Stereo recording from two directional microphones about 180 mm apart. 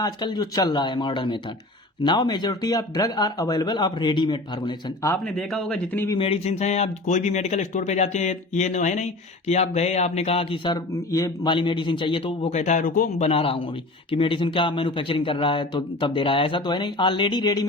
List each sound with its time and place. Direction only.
0.0 s speech: 25° left (ahead or behind)
5.0 s speech: 5° left (ahead or behind)
6.1 s speech: 30° left (ahead or behind)
13.2 s speech: 30° left (ahead or behind)